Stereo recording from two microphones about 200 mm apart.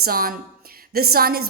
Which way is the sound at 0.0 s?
45° right (ahead or behind).